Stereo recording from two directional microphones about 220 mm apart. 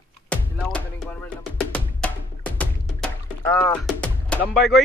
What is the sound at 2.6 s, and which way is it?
Music, 5° left (ahead or behind).